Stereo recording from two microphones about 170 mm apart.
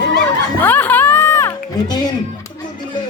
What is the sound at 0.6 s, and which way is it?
Music, 10° left (ahead or behind).